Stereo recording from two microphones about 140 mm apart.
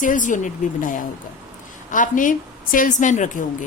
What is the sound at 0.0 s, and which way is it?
A woman's voice, 65° left (ahead or behind).